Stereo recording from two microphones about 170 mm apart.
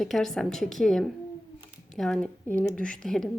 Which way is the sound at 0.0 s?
Centre (ahead or behind).